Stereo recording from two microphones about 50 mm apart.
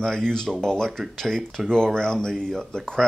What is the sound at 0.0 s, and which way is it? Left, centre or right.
Speech, centre.